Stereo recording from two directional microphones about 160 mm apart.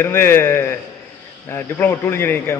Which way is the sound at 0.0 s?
15° left (ahead or behind).